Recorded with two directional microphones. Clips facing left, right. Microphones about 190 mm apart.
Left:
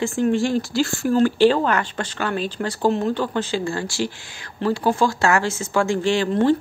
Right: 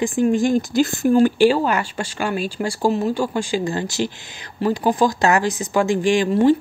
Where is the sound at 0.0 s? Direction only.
15° right (ahead or behind).